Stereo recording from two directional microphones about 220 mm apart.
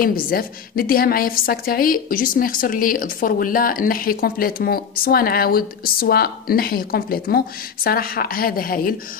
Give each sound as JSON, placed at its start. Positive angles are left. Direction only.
{"t": 0.0, "sound": "a woman's voice", "side_deg": 40}